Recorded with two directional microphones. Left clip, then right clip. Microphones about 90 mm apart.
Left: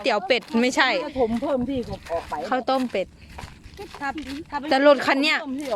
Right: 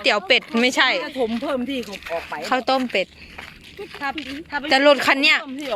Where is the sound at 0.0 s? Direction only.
5° left (ahead or behind); by 1.0 s 20° left (ahead or behind).